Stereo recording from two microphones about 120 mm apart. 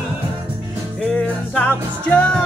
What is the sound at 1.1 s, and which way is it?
Music, 10° left (ahead or behind).